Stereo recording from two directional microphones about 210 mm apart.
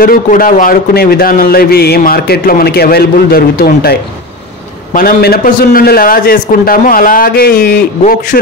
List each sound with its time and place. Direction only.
0.0 s a man's voice: 45° left (ahead or behind)